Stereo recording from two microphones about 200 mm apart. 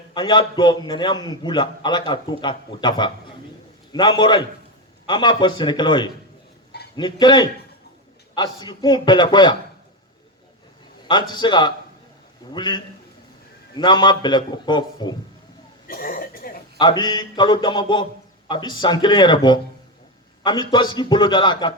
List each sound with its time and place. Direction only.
0.1 s a man's voice: 25° left (ahead or behind)
11.1 s a man's voice: 20° left (ahead or behind)
15.9 s a sound: 45° left (ahead or behind)
16.7 s a man's voice: 20° left (ahead or behind)